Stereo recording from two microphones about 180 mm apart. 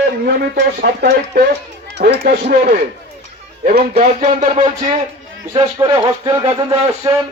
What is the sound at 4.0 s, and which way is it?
Speech, 40° right (ahead or behind).